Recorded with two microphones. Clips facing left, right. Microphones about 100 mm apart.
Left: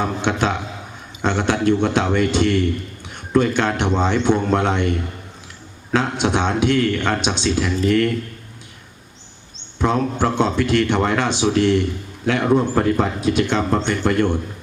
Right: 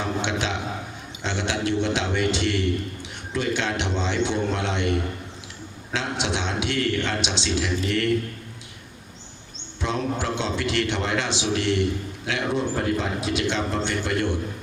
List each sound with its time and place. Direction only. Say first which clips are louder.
0.0 s a sound: left 6 dB; 50° left (ahead or behind)
1.2 s a man's voice: left 8 dB; 50° left (ahead or behind)
9.8 s a man's voice: left 7 dB; 50° left (ahead or behind)